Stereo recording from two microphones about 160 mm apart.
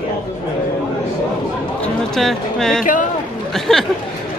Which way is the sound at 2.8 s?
55° left (ahead or behind).